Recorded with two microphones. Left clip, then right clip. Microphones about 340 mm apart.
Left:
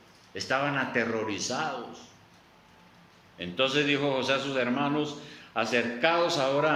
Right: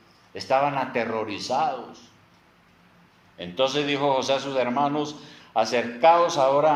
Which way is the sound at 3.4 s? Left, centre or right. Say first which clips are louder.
Right 2 dB; centre.